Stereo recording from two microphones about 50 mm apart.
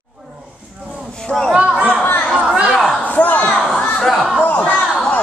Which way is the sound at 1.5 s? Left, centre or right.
Right.